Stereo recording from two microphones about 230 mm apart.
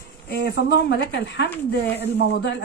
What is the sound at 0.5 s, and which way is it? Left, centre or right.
Speech, left.